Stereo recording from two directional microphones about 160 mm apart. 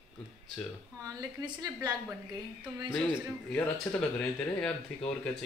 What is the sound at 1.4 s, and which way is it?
Speech, 25° right (ahead or behind).